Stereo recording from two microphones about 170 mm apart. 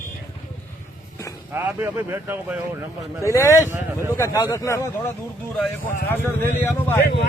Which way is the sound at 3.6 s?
15° right (ahead or behind).